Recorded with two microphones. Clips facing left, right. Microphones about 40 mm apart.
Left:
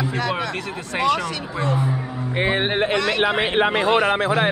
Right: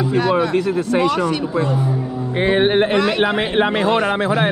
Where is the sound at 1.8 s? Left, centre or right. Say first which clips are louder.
Right 3 dB; left.